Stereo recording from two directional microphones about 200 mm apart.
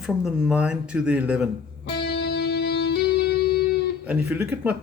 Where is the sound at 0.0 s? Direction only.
5° right (ahead or behind).